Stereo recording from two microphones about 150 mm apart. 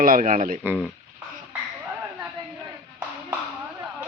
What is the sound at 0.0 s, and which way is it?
Speech, 65° right (ahead or behind).